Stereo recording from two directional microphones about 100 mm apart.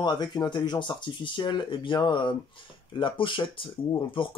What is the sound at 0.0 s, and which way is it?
Speech, 45° left (ahead or behind).